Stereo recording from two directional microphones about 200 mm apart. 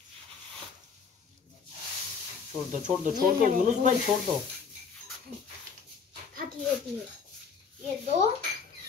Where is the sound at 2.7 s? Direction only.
40° right (ahead or behind).